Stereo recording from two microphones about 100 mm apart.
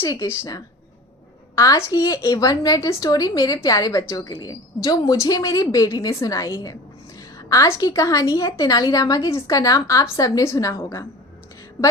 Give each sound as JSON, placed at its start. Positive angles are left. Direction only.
{"t": 0.1, "sound": "a woman's voice", "side_deg": 35}